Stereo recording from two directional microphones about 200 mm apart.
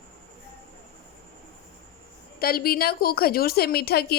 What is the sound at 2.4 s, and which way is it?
A woman's voice, 50° left (ahead or behind).